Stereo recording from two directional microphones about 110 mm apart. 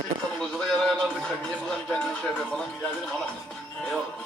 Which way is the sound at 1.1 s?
10° left (ahead or behind).